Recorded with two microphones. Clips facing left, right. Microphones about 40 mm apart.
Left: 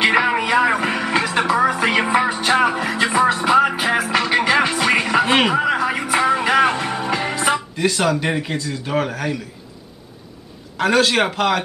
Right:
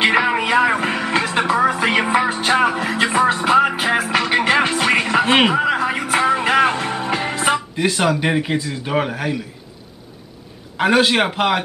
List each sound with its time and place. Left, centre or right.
0.0 s a sound: centre
0.4 s music: centre
3.0 s music: centre
7.3 s speech: centre
10.8 s a man's voice: centre